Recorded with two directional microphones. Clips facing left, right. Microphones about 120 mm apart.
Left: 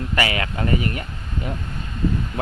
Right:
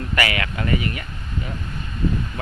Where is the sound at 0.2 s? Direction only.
25° left (ahead or behind).